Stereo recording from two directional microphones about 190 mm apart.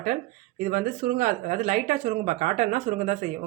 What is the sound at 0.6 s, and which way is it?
Speech, 45° right (ahead or behind).